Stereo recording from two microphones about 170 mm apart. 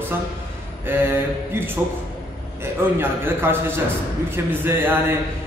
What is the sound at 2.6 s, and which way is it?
Speech, 15° right (ahead or behind).